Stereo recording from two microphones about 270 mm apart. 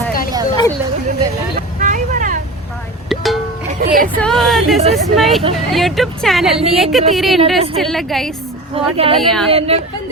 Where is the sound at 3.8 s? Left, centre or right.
Right.